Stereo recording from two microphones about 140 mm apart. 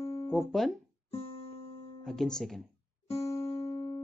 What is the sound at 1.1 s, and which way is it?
Music, 45° left (ahead or behind).